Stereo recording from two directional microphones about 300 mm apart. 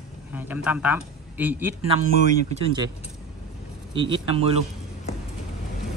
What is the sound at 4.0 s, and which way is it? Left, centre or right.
Speech, centre.